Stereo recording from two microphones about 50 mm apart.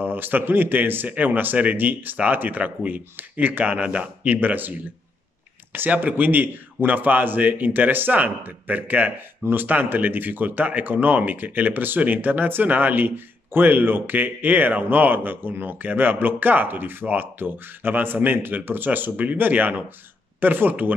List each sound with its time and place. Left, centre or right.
0.0 s a man's voice: right
5.9 s speech: right